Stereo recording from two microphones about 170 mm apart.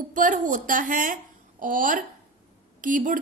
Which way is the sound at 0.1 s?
50° right (ahead or behind).